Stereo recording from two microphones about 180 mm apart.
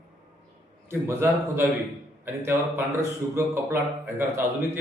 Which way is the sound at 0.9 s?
15° right (ahead or behind).